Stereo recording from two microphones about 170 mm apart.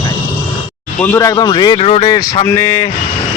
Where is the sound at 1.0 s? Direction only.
20° left (ahead or behind).